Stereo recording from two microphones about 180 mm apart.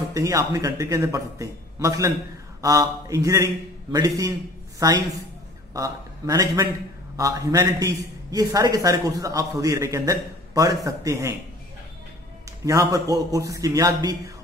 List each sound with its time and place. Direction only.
0.1 s a man's voice: 15° right (ahead or behind)
12.6 s a man's voice: 20° right (ahead or behind)